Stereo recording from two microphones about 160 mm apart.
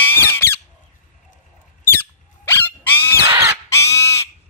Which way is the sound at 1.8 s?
15° left (ahead or behind).